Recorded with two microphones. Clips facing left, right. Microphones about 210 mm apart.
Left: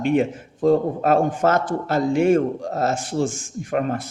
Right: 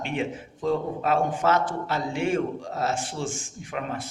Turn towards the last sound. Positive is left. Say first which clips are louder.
# left 9 dB
turn(degrees=50)  # may be behind; listen again after turning